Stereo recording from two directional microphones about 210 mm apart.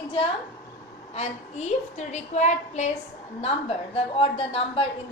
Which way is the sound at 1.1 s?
30° left (ahead or behind).